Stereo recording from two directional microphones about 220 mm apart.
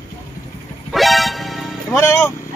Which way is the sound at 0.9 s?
Centre (ahead or behind).